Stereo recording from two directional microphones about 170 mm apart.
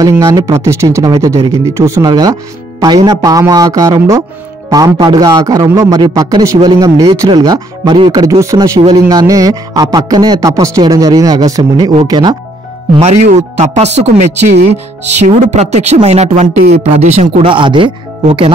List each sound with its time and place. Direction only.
0.0 s a man's voice: 20° right (ahead or behind)
12.9 s speech: 40° right (ahead or behind)